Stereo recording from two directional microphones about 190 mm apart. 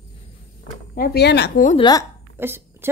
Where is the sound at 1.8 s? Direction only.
20° left (ahead or behind).